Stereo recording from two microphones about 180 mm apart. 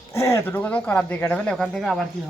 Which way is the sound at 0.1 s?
15° left (ahead or behind).